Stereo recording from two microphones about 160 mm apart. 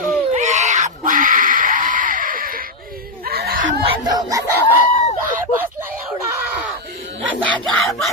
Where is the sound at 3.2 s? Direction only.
75° right (ahead or behind).